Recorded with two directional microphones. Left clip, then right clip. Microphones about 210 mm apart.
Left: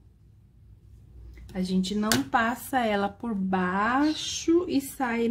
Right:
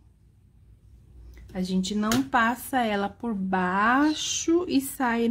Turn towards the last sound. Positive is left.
turn(degrees=-15)  # may be behind; listen again after turning